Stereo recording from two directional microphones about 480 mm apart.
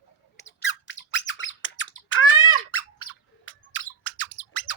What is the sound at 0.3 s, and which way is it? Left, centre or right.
Squawk, left.